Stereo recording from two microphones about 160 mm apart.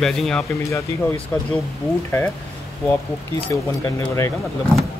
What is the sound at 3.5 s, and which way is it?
Speech, 20° left (ahead or behind).